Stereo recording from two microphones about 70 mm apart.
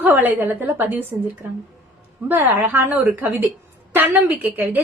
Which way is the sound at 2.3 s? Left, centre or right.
Right.